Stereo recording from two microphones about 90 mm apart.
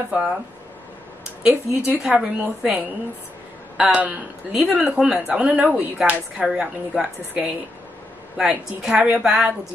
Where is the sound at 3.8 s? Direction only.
15° right (ahead or behind).